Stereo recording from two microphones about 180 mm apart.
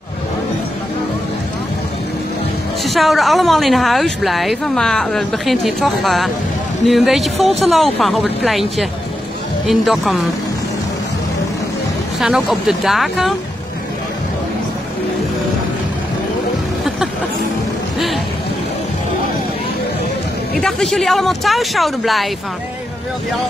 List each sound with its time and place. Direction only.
2.8 s speech: centre (ahead or behind)
12.2 s speech: centre (ahead or behind)
17.9 s speech: centre (ahead or behind)
20.5 s speech: centre (ahead or behind)